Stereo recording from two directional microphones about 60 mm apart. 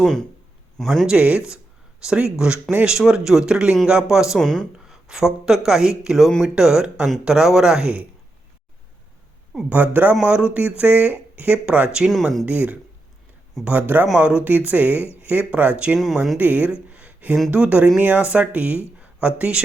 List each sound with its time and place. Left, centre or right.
0.0 s speech: centre
1.0 s speech: centre
4.4 s speech: centre
4.9 s speech: centre
9.6 s speech: right
11.6 s speech: centre
12.5 s speech: right
16.9 s a sound: right
17.5 s speech: right
18.9 s a sound: right